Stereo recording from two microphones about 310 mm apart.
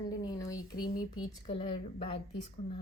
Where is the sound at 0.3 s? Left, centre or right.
Centre.